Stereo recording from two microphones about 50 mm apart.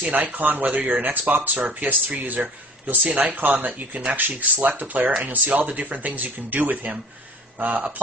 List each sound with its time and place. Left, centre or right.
0.1 s speech: right